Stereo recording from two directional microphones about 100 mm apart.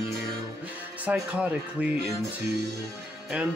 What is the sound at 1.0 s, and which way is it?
Music, 10° right (ahead or behind).